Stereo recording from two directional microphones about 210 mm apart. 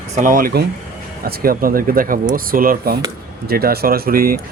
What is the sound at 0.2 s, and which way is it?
Speech, 40° right (ahead or behind).